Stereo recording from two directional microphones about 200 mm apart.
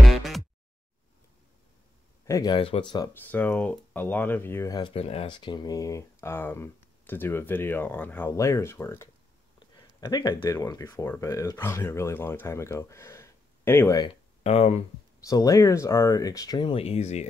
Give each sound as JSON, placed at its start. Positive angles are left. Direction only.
{"t": 0.0, "sound": "music", "side_deg": 0}
{"t": 2.2, "sound": "speech", "side_deg": 20}
{"t": 3.1, "sound": "speech", "side_deg": 10}
{"t": 14.4, "sound": "speech", "side_deg": 35}
{"t": 15.1, "sound": "speech", "side_deg": 15}